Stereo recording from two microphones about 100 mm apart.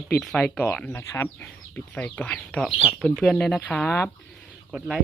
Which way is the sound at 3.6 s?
15° left (ahead or behind).